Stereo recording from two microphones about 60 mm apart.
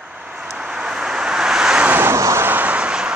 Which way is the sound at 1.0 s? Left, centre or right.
Centre.